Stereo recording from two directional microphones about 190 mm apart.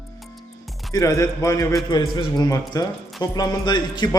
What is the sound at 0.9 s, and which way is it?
A man's voice, 15° left (ahead or behind).